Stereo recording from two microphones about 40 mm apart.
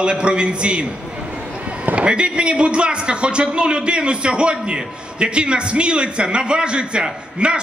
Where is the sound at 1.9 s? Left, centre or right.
Right.